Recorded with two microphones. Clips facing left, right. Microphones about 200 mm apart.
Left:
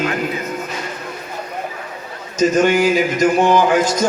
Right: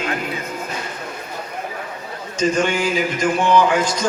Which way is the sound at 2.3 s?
45° left (ahead or behind).